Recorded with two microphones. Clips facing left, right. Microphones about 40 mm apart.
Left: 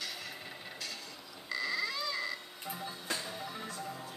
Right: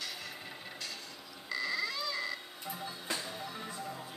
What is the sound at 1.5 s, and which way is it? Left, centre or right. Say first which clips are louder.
Music: even; centre.